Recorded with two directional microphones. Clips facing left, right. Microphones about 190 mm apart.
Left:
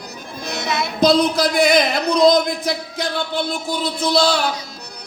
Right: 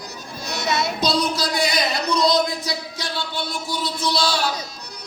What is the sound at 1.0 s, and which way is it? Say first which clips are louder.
Speech: left 12 dB; 55° left (ahead or behind).